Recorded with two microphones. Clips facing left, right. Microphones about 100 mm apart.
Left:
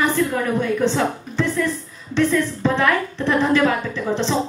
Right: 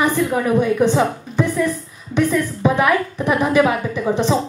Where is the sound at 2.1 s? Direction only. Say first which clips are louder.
Right 1 dB; 15° right (ahead or behind).